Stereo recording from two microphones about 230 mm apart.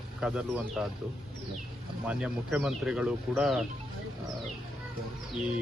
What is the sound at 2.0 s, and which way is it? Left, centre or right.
Speech, centre.